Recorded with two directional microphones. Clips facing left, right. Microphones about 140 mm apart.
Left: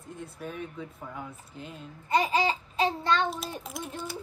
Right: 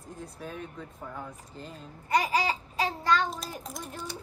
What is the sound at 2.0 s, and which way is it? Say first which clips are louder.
Babbling: left 1 dB; 25° left (ahead or behind).